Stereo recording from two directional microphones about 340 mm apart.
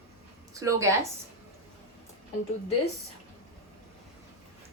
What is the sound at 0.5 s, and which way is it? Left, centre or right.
Speech, centre.